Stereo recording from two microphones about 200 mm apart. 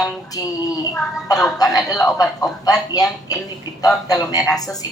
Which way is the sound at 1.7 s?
15° left (ahead or behind).